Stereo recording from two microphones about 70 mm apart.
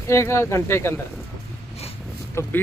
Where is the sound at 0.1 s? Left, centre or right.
Left.